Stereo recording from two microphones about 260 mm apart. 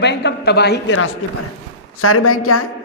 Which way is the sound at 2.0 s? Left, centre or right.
Left.